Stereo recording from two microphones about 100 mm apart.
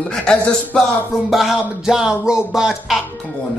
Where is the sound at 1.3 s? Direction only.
Centre (ahead or behind).